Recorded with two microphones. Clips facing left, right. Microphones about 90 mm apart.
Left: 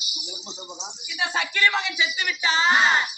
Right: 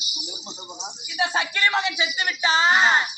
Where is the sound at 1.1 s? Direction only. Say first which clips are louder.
Right 2 dB; 25° right (ahead or behind).